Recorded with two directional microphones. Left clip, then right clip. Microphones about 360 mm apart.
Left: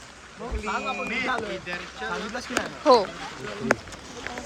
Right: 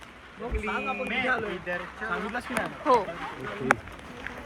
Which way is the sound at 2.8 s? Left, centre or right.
Centre.